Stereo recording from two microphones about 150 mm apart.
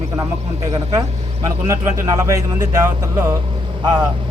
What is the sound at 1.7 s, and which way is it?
A man's voice, 20° right (ahead or behind).